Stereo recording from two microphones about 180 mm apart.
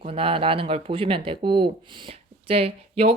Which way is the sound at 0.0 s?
30° right (ahead or behind).